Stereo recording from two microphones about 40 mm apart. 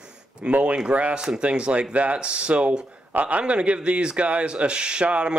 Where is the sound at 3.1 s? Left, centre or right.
Right.